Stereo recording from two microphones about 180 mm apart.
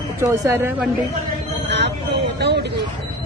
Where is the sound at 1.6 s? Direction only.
70° right (ahead or behind).